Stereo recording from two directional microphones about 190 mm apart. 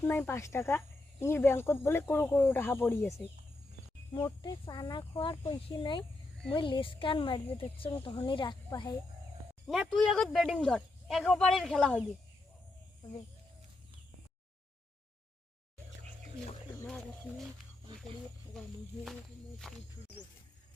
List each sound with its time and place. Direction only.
0.0 s speech: 10° left (ahead or behind)
9.6 s speech: centre (ahead or behind)
16.8 s speech: centre (ahead or behind)
18.5 s speech: 5° left (ahead or behind)